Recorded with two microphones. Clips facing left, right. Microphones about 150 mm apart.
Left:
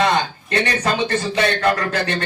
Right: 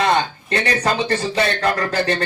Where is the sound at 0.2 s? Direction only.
30° right (ahead or behind).